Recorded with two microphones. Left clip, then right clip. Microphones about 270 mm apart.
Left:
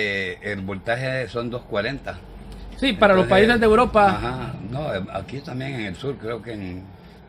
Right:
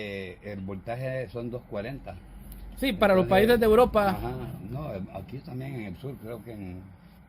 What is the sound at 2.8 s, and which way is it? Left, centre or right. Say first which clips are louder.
Speech: left 6 dB; right.